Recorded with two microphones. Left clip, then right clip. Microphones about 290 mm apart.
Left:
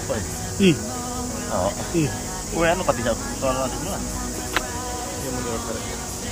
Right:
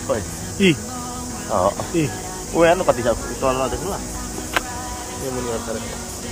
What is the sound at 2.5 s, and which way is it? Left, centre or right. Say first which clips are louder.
Speech: right 5 dB; right.